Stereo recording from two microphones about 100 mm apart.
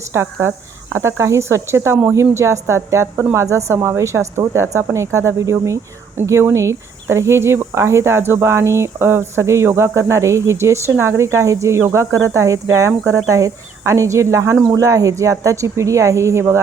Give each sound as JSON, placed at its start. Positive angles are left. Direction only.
{"t": 0.1, "sound": "a woman's voice", "side_deg": -25}